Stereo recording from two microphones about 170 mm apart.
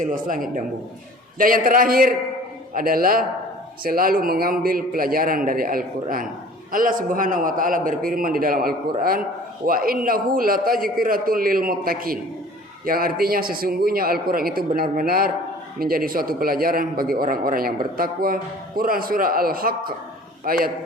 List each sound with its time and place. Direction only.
0.0 s a man's voice: 55° right (ahead or behind)